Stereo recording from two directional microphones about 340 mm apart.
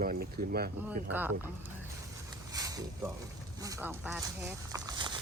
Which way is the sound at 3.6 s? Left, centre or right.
Centre.